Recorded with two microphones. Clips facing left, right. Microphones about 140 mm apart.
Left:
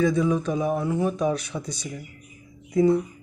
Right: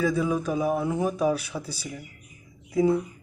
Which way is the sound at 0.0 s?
5° right (ahead or behind).